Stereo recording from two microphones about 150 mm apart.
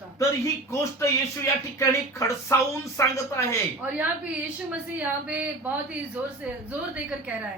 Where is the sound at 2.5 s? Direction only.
20° left (ahead or behind).